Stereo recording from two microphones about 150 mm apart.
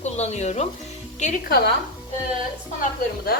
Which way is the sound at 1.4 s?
90° left.